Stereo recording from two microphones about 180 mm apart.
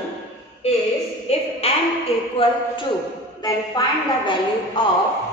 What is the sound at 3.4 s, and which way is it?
A woman's voice, 25° left (ahead or behind).